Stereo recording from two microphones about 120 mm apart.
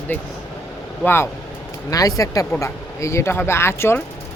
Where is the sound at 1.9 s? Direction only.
30° left (ahead or behind).